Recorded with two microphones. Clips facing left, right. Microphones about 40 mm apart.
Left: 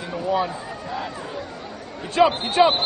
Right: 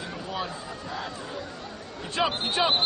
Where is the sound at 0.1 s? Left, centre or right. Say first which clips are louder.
Left 12 dB; centre.